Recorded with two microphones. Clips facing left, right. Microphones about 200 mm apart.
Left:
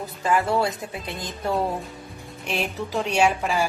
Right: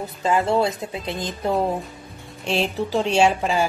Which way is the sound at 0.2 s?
20° right (ahead or behind).